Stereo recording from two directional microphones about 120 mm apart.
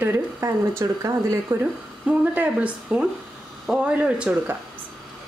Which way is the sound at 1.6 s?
15° right (ahead or behind).